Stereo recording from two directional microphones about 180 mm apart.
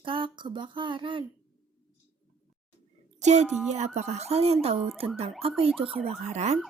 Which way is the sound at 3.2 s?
40° right (ahead or behind).